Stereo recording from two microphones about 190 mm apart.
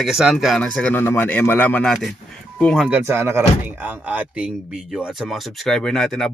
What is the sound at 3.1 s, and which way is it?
Speech, 10° right (ahead or behind).